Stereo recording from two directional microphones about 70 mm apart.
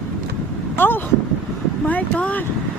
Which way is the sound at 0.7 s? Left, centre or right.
Left.